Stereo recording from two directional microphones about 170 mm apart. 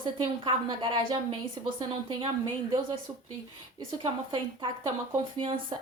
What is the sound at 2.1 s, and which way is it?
Speech, 30° right (ahead or behind).